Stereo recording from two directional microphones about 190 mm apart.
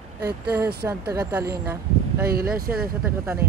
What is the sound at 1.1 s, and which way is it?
Speech, 10° right (ahead or behind).